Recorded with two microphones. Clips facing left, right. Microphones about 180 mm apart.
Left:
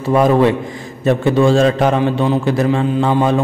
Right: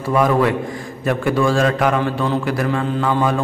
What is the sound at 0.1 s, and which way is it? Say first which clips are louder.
A man's voice: left 4 dB; 25° left (ahead or behind).